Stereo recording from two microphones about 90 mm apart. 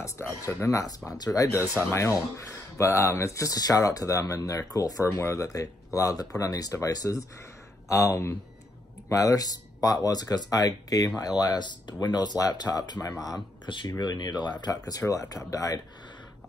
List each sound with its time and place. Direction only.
0.5 s speech: 30° left (ahead or behind)
1.0 s speech: 45° left (ahead or behind)
5.1 s speech: 30° left (ahead or behind)